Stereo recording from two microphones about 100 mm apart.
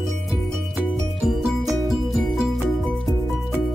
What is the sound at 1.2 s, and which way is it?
Music, 5° right (ahead or behind).